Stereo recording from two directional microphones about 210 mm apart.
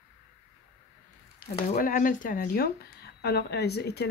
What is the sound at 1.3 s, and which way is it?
Speech, 40° left (ahead or behind).